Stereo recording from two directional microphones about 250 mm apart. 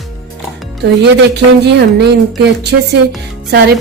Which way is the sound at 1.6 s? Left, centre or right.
Right.